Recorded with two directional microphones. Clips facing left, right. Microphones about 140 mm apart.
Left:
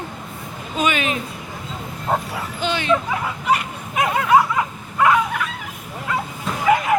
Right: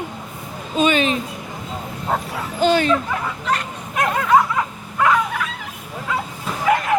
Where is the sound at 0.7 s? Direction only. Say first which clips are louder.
Right 4 dB; 30° right (ahead or behind).